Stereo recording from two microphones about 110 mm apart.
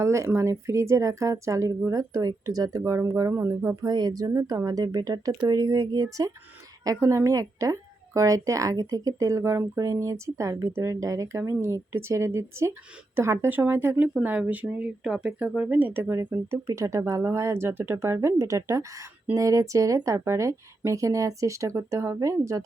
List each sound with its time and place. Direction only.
0.0 s speech: 25° right (ahead or behind)